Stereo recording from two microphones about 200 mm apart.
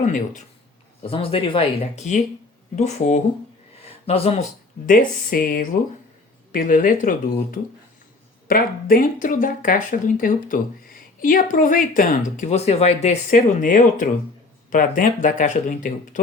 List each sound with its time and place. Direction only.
0.0 s speech: 35° left (ahead or behind)
4.9 s speech: 45° left (ahead or behind)